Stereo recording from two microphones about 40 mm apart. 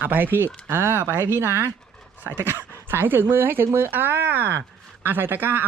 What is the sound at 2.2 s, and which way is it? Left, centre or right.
Speech, right.